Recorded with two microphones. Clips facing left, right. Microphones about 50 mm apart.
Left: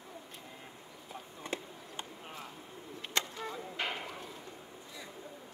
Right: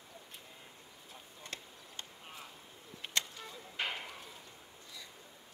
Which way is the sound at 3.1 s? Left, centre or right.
Left.